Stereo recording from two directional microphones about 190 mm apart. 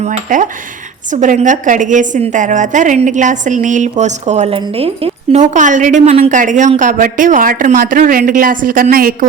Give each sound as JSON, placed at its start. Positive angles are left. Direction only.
{"t": 0.0, "sound": "a woman's voice", "side_deg": -40}